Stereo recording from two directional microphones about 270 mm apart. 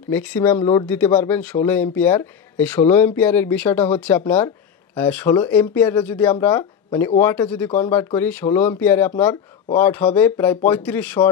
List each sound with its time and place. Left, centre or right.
0.1 s speech: centre